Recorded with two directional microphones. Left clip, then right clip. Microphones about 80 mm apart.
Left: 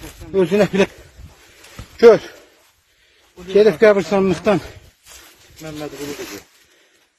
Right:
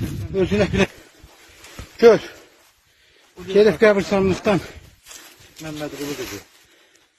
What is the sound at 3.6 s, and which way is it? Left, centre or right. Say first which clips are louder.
Speech: left 2 dB; left.